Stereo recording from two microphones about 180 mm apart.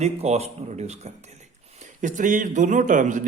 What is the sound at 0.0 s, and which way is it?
A man's voice, 35° right (ahead or behind).